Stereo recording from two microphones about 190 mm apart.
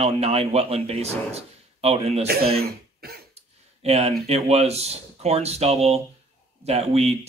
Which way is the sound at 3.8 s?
35° right (ahead or behind).